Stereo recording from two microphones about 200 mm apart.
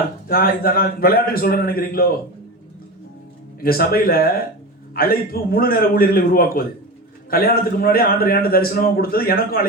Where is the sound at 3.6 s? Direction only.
50° left (ahead or behind).